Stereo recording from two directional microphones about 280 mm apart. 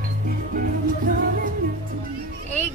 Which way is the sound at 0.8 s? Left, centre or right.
Right.